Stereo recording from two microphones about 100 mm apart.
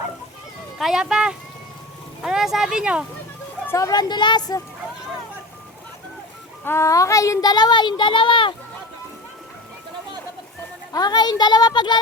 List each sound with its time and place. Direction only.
0.8 s speech: 5° right (ahead or behind)
3.7 s speech: 35° left (ahead or behind)
6.7 s speech: 30° left (ahead or behind); by 8.5 s 55° left (ahead or behind)
10.9 s speech: 45° left (ahead or behind)